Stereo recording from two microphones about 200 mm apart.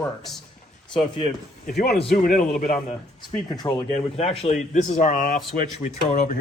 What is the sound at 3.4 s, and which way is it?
Speech, 20° left (ahead or behind).